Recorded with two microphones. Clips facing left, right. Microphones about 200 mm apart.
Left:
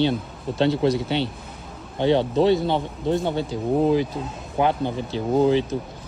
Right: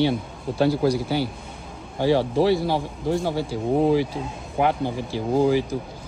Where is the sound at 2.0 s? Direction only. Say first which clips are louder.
Left 1 dB; 20° left (ahead or behind).